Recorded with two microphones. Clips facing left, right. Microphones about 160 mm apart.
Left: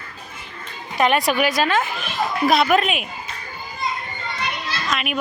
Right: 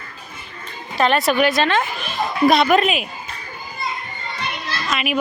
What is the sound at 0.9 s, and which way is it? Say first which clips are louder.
A woman's voice: right 1 dB; 15° left (ahead or behind).